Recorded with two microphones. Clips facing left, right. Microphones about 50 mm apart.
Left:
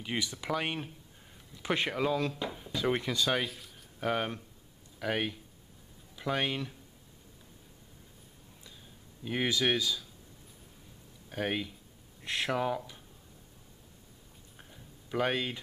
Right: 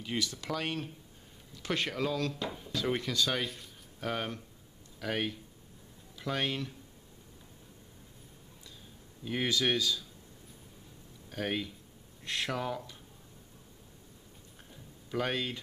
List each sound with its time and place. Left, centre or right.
0.0 s speech: centre
2.4 s a sound: centre
2.7 s speech: centre
9.2 s speech: centre
11.2 s speech: centre
14.7 s a sound: centre